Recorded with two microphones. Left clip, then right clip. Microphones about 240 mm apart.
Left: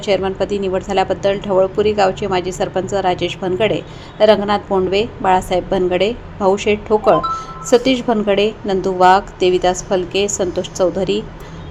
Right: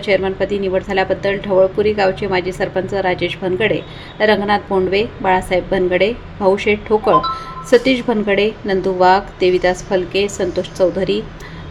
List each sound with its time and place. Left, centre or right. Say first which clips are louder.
0.0 s a woman's voice: right 1 dB; centre